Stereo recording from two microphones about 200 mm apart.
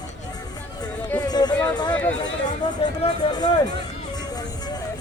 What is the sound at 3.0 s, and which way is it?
Music, 20° left (ahead or behind).